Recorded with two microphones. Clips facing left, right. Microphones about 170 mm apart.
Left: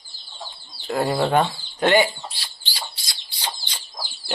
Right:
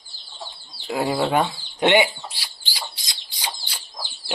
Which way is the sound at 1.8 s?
20° right (ahead or behind).